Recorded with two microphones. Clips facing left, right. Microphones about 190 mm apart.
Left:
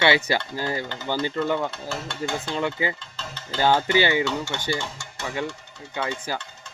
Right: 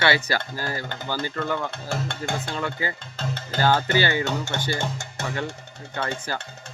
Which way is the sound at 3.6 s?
15° left (ahead or behind).